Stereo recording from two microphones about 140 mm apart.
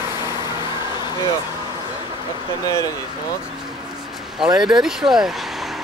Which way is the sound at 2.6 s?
25° left (ahead or behind).